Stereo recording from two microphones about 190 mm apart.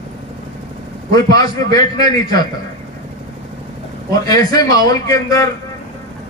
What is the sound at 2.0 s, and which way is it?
Speech, 20° left (ahead or behind).